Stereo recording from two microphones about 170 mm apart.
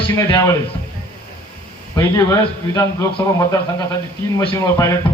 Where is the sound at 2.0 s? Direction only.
20° left (ahead or behind).